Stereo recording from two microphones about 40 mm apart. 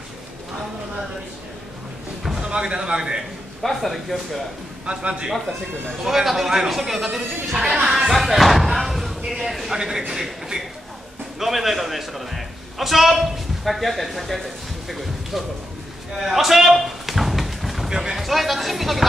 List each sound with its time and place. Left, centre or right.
2.4 s a man's voice: right
3.6 s speech: centre
4.8 s a man's voice: right
6.0 s speech: centre
7.5 s speech: centre
8.1 s a man's voice: centre
16.1 s a sound: centre
17.8 s speech: centre
18.1 s speech: centre